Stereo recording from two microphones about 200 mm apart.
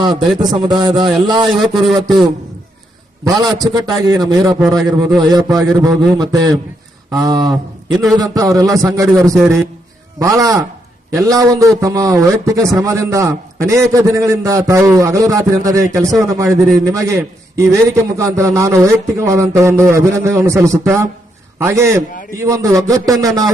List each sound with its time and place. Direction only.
0.3 s a man's voice: 20° right (ahead or behind)
1.7 s speech: centre (ahead or behind)
3.2 s a man's voice: 20° right (ahead or behind)
22.1 s a man's voice: 40° left (ahead or behind)
22.4 s a man's voice: 15° right (ahead or behind)